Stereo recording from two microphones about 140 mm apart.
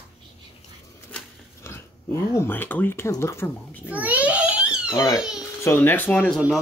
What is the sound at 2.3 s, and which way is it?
A child's voice, 15° left (ahead or behind).